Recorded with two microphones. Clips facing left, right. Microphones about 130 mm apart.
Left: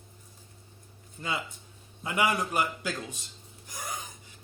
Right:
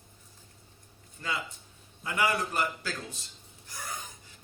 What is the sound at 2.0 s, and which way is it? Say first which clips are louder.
Speech: left 1 dB; 20° left (ahead or behind).